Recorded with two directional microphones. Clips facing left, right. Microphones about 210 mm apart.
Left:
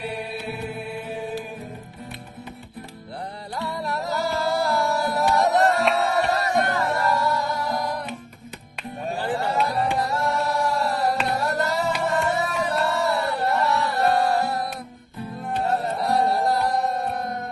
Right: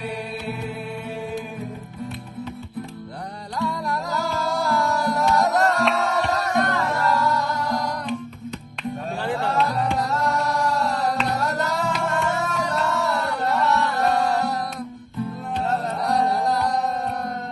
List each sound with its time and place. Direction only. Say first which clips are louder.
3.7 s music: right 1 dB; 25° left (ahead or behind)
4.5 s music: right 2 dB; centre (ahead or behind)
9.2 s music: right 1 dB; centre (ahead or behind)
15.6 s music: even; centre (ahead or behind)